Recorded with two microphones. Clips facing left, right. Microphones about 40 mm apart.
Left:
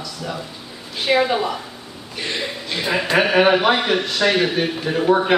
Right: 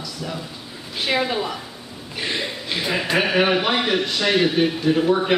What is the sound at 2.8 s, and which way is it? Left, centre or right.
A man's voice, centre.